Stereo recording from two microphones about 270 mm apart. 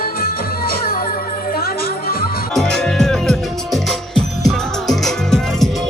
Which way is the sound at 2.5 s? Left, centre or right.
Centre.